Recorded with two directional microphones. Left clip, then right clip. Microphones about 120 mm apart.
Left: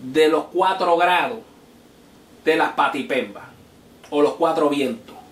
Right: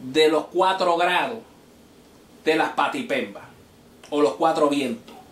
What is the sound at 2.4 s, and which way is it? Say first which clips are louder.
Speech: left 3 dB; 25° right (ahead or behind).